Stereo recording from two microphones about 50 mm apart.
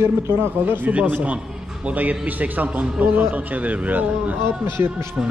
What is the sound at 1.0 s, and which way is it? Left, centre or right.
A man's voice, right.